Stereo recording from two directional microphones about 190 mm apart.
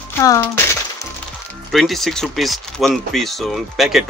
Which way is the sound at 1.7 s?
Centre (ahead or behind).